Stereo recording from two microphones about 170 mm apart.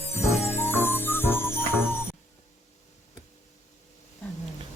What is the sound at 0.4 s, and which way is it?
Jingle bell, 15° left (ahead or behind).